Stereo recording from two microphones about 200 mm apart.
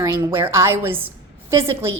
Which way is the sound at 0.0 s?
10° right (ahead or behind).